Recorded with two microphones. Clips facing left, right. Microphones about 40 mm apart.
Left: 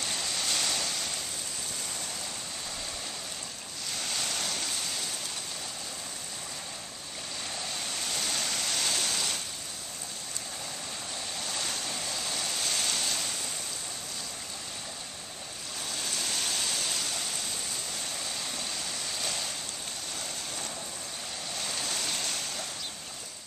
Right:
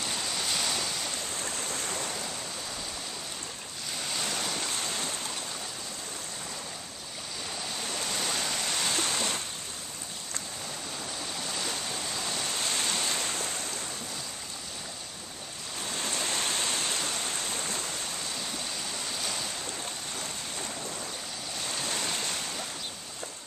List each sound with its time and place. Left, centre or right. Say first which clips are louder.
0.0 s waves: right 1 dB; centre
4.0 s waves: right 1 dB; centre
8.1 s waves: right 1 dB; centre
11.3 s waves: right 1 dB; centre
15.9 s waves: right 3 dB; right
19.1 s waves: left 1 dB; centre
21.5 s waves: right 1 dB; centre
21.8 s a sound: right 3 dB; centre